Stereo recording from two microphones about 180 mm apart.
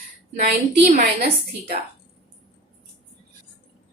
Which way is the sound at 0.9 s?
50° right (ahead or behind).